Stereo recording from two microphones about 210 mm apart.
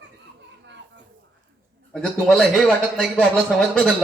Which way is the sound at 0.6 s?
60° right (ahead or behind).